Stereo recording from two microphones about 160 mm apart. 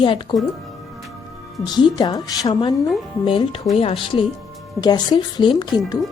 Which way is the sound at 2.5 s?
35° left (ahead or behind).